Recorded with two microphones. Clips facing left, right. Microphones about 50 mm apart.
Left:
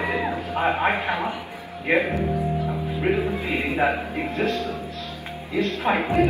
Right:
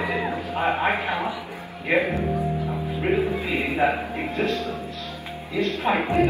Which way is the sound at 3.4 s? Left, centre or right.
Left.